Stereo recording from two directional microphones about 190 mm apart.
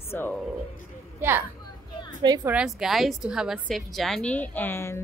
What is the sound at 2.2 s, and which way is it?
Speech, 20° right (ahead or behind).